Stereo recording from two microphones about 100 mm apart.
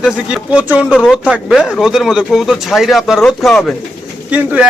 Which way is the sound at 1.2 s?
10° right (ahead or behind).